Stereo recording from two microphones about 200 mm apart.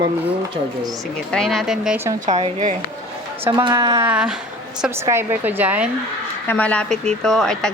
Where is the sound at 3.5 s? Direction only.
20° right (ahead or behind).